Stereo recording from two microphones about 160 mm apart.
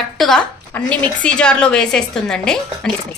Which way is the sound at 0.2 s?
5° left (ahead or behind).